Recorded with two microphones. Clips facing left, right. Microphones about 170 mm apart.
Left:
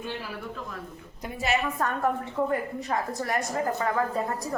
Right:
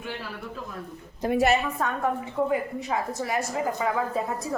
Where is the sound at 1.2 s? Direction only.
35° right (ahead or behind).